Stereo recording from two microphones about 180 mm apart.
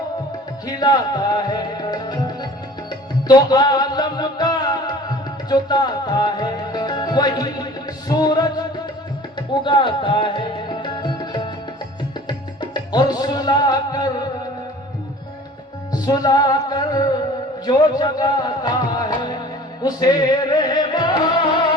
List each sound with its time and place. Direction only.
0.7 s music: 20° left (ahead or behind)
15.9 s music: 20° left (ahead or behind)